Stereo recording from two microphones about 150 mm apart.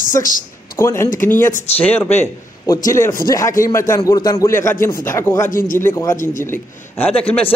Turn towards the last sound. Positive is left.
turn(degrees=15)  # may be behind; listen again after turning